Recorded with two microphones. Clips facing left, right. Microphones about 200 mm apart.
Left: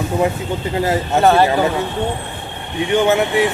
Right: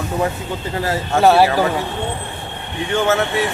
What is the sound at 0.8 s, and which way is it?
Speech, 20° left (ahead or behind).